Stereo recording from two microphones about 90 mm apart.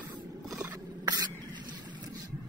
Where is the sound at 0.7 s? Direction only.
45° right (ahead or behind).